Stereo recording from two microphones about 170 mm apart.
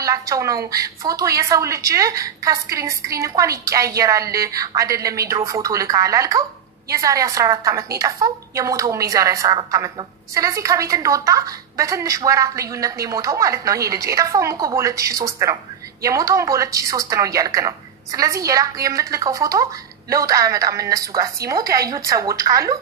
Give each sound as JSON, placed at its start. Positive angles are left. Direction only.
{"t": 0.0, "sound": "a woman's voice", "side_deg": -20}